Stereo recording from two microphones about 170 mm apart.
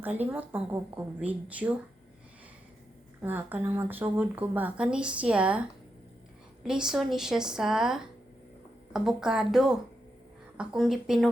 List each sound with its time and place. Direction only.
0.0 s speech: 10° right (ahead or behind)
3.2 s speech: 10° right (ahead or behind)